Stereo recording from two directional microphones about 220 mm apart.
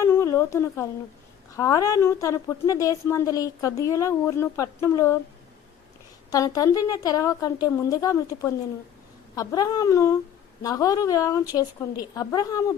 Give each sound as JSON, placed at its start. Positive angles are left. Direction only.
{"t": 0.0, "sound": "a sound", "side_deg": 10}
{"t": 1.5, "sound": "a woman's voice", "side_deg": 15}
{"t": 6.3, "sound": "a woman's voice", "side_deg": 15}